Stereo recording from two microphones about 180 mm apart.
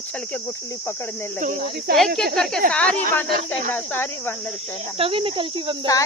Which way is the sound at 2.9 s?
50° right (ahead or behind).